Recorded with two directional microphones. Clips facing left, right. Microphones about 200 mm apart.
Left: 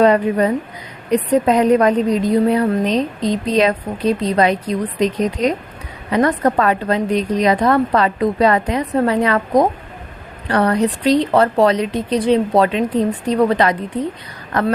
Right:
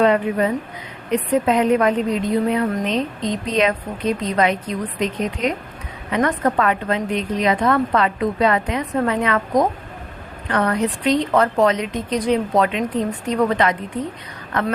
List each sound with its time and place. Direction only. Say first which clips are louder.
0.0 s a woman's voice: left 3 dB; 40° left (ahead or behind)